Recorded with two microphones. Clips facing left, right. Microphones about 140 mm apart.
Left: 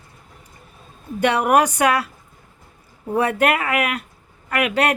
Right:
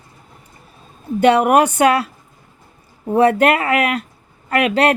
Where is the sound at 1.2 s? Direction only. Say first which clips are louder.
Right 4 dB; 25° right (ahead or behind).